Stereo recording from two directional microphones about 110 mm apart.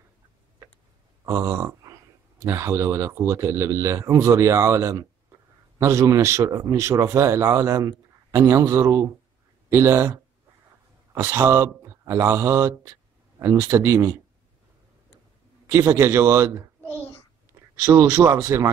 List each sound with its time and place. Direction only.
1.2 s a man's voice: 25° right (ahead or behind)
11.1 s a man's voice: 20° right (ahead or behind)
15.6 s a man's voice: 25° right (ahead or behind)
16.8 s a sound: 20° left (ahead or behind)
17.8 s a man's voice: 20° right (ahead or behind)